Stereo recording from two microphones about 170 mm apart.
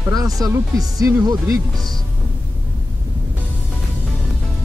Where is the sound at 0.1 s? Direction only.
20° right (ahead or behind).